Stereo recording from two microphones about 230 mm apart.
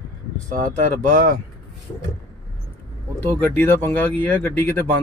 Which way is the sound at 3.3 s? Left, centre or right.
Centre.